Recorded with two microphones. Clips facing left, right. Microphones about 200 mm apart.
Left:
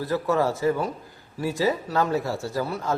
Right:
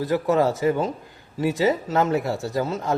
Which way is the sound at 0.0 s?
20° right (ahead or behind).